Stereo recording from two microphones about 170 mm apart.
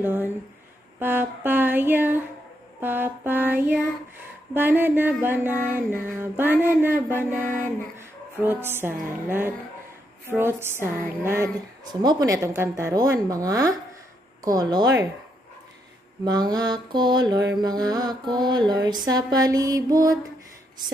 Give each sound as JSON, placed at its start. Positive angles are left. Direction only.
{"t": 0.0, "sound": "music", "side_deg": -10}
{"t": 11.9, "sound": "a woman's voice", "side_deg": -25}
{"t": 16.3, "sound": "a woman's voice", "side_deg": -25}